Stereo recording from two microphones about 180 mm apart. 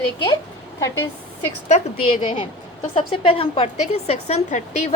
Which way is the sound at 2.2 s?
30° left (ahead or behind).